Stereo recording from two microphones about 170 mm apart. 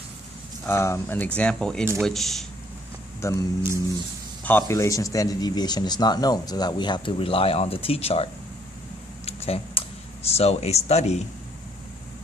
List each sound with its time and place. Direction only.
0.7 s speech: 15° left (ahead or behind)
3.2 s speech: 20° left (ahead or behind)
4.4 s speech: 15° left (ahead or behind); by 8.3 s 35° left (ahead or behind)
9.2 s typing: 35° left (ahead or behind)
10.2 s speech: 35° left (ahead or behind)